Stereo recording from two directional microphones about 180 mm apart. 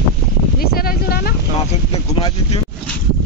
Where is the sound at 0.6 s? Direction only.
60° left (ahead or behind).